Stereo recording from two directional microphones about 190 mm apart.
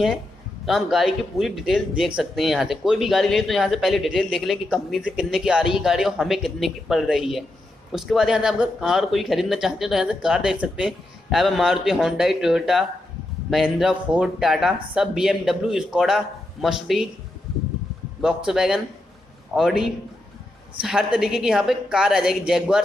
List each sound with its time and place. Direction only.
0.7 s speech: centre (ahead or behind)
18.2 s speech: 5° right (ahead or behind)